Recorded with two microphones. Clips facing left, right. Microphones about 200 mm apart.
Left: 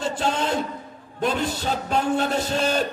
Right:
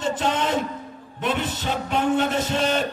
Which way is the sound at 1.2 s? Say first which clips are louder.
Left 1 dB; 35° left (ahead or behind).